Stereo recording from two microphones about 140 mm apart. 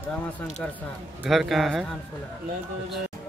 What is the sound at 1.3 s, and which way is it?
Speech, centre (ahead or behind).